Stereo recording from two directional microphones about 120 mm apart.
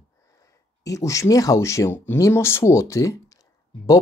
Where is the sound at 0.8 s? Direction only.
25° left (ahead or behind).